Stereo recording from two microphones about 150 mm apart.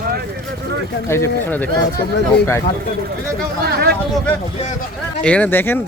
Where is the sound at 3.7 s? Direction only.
90° right.